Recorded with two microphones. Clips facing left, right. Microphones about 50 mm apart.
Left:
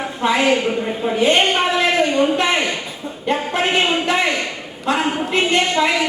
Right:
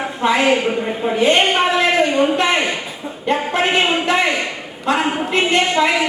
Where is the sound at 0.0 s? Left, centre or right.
Centre.